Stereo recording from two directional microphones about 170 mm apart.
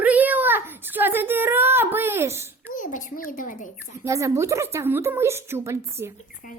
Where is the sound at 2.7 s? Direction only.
50° left (ahead or behind).